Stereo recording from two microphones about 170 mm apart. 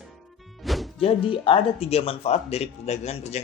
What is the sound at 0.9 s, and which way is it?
Speech, 35° left (ahead or behind).